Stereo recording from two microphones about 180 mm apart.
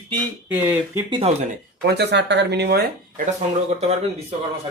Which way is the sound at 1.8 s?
65° right (ahead or behind).